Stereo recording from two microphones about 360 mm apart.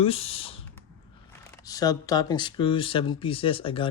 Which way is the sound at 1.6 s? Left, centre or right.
Centre.